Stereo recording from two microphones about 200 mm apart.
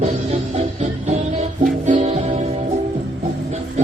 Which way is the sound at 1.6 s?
40° right (ahead or behind).